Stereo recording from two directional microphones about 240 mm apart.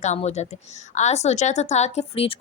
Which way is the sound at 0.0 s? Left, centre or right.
Left.